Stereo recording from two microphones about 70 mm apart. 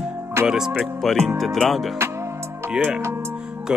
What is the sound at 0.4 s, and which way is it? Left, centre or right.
Music, right.